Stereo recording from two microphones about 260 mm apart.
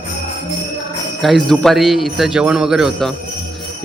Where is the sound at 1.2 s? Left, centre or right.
Centre.